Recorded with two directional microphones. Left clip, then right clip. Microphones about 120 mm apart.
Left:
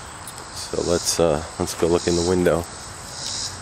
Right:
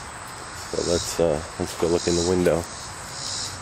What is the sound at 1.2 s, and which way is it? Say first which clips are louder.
Speech: left 3 dB; 25° left (ahead or behind).